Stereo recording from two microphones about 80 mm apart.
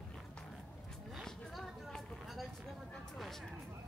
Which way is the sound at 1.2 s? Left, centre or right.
Centre.